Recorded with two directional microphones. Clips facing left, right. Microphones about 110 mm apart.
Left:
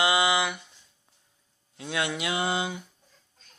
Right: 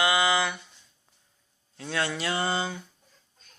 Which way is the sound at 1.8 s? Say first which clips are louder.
Even; 15° left (ahead or behind).